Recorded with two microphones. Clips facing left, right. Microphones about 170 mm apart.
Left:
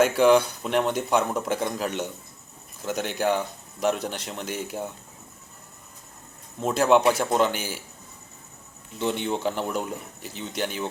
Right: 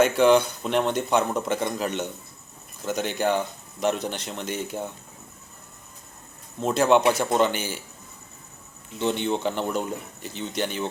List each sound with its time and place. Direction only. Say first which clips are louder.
0.0 s speech: even; 5° left (ahead or behind)
6.6 s speech: even; 5° left (ahead or behind)
9.0 s speech: right 2 dB; 5° left (ahead or behind)